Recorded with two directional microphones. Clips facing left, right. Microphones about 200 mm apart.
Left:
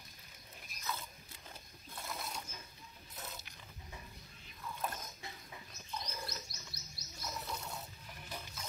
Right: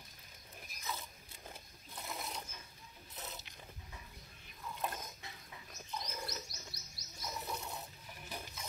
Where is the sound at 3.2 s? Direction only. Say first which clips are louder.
Even; 20° right (ahead or behind).